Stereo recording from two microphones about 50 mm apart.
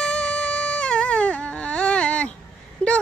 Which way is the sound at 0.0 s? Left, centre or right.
Centre.